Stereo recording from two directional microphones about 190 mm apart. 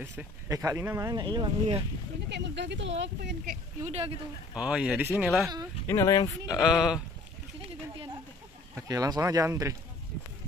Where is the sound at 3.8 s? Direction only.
35° right (ahead or behind).